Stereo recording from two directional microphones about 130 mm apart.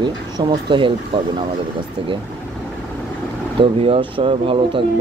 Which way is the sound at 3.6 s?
45° right (ahead or behind).